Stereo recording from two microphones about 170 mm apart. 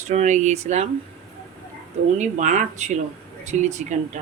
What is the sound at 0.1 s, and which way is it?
Speech, 45° right (ahead or behind).